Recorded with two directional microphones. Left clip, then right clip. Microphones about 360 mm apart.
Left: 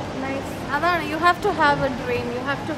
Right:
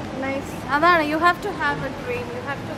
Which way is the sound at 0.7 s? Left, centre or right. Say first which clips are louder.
Right 5 dB; centre.